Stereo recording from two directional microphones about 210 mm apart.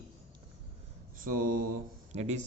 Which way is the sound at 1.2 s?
40° right (ahead or behind).